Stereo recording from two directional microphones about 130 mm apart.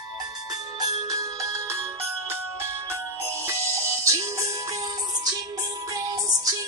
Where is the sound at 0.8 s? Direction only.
30° right (ahead or behind).